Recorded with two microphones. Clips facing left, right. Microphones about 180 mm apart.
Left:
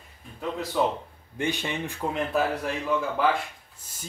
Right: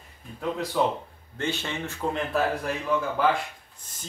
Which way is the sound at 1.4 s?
15° left (ahead or behind).